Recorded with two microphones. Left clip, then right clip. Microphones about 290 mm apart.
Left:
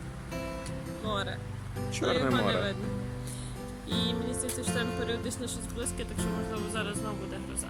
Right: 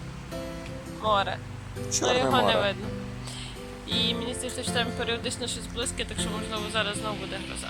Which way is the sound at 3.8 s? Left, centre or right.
Centre.